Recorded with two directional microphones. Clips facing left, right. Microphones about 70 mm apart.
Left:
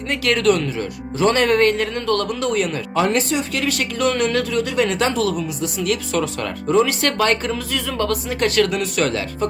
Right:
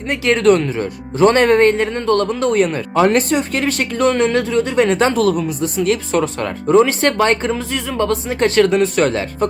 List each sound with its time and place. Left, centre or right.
0.1 s speech: right
5.2 s speech: right
5.6 s speech: right